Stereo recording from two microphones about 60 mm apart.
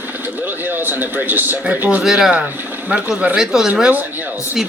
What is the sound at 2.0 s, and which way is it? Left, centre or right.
Speech, centre.